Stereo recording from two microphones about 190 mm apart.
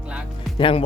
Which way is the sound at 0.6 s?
25° left (ahead or behind).